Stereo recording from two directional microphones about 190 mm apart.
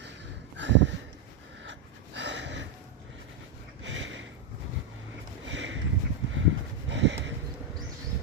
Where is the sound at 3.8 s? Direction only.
80° right.